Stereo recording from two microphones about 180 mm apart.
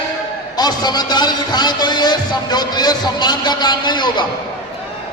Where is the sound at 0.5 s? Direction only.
20° left (ahead or behind).